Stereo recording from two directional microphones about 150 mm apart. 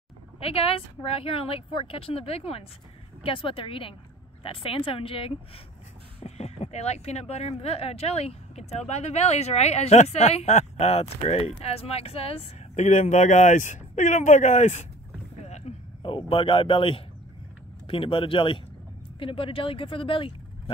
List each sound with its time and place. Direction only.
0.4 s a woman's voice: 40° left (ahead or behind)
15.4 s a sound: 45° left (ahead or behind)
17.8 s a woman's voice: 35° left (ahead or behind)